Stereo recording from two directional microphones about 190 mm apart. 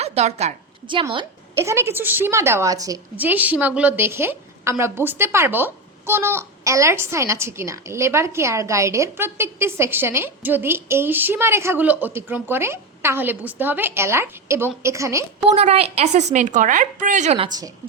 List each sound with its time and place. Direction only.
0.0 s a woman's voice: 35° right (ahead or behind)
1.5 s a woman's voice: 15° right (ahead or behind)
15.4 s a woman's voice: 35° right (ahead or behind)